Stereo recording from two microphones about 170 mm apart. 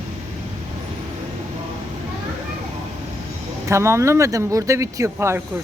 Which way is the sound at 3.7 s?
15° right (ahead or behind).